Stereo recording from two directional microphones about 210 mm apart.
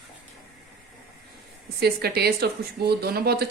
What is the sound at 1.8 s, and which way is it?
A woman's voice, 50° right (ahead or behind).